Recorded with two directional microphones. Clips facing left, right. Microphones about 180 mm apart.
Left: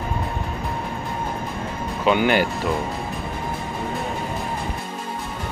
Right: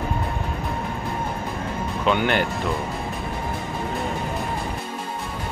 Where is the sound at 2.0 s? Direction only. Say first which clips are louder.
Left 3 dB; 5° left (ahead or behind).